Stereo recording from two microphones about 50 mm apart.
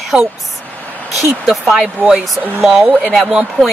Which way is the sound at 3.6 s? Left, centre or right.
Centre.